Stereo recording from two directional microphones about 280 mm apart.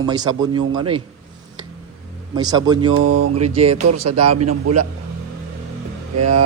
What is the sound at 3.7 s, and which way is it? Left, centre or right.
A man's voice, right.